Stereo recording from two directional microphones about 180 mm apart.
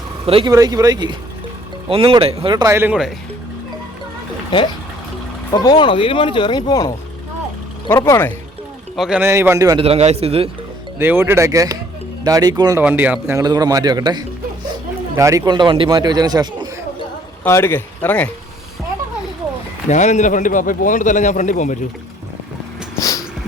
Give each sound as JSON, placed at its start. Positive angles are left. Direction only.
{"t": 0.3, "sound": "a man's voice", "side_deg": -30}
{"t": 0.5, "sound": "a man's voice", "side_deg": -20}
{"t": 5.5, "sound": "speech", "side_deg": 25}
{"t": 9.0, "sound": "speech", "side_deg": -5}
{"t": 9.8, "sound": "a man's voice", "side_deg": -35}
{"t": 10.9, "sound": "speech", "side_deg": -10}
{"t": 12.8, "sound": "speech", "side_deg": -10}
{"t": 17.4, "sound": "speech", "side_deg": 10}
{"t": 19.9, "sound": "a man's voice", "side_deg": 40}
{"t": 23.0, "sound": "a sound", "side_deg": 20}